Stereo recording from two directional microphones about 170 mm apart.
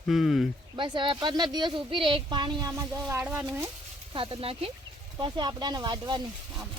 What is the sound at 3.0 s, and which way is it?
Speech, 10° right (ahead or behind).